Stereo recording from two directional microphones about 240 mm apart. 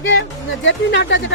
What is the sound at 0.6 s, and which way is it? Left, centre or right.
Speech, left.